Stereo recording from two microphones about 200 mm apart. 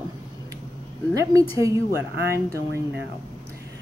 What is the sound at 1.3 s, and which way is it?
Speech, 15° right (ahead or behind).